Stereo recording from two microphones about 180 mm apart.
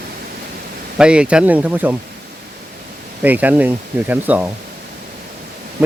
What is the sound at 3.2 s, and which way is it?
Speech, 10° right (ahead or behind).